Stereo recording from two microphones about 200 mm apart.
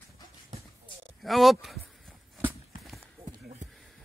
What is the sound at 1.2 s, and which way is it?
Speech, centre (ahead or behind).